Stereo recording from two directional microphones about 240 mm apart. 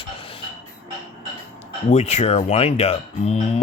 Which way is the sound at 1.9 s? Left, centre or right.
Left.